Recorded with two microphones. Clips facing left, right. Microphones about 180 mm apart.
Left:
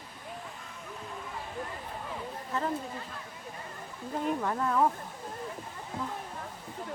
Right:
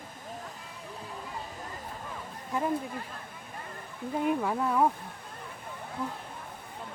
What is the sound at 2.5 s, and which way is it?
Speech, 10° right (ahead or behind).